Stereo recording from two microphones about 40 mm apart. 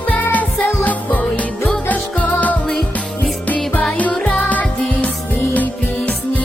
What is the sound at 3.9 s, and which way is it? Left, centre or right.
Music, left.